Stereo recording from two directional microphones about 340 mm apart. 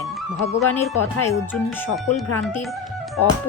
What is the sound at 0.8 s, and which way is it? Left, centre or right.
Speech, centre.